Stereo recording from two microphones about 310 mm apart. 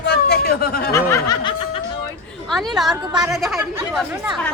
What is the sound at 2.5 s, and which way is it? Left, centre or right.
A woman's voice, centre.